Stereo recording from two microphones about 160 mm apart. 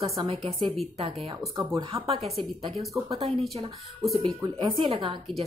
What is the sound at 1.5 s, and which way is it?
Speech, 25° right (ahead or behind).